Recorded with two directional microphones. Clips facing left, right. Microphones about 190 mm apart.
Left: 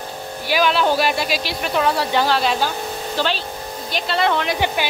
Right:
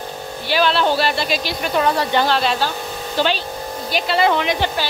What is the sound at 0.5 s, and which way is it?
Speech, 10° left (ahead or behind).